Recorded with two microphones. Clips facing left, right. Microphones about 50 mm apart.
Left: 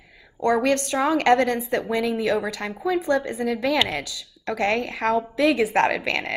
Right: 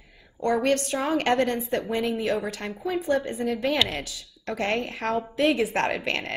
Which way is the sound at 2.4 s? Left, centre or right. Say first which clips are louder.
Left 4 dB; left.